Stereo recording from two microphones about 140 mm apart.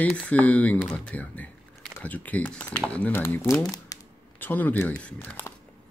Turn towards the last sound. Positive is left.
turn(degrees=15)  # may be behind; listen again after turning